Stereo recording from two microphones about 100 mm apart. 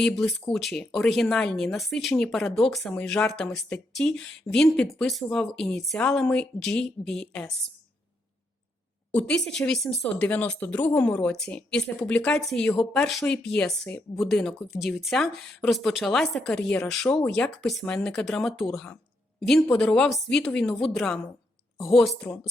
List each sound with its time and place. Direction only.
0.0 s speech: 5° left (ahead or behind)
2.9 s speech: 15° left (ahead or behind)
9.1 s speech: 5° left (ahead or behind)
10.0 s speech: 20° left (ahead or behind); by 22.1 s centre (ahead or behind)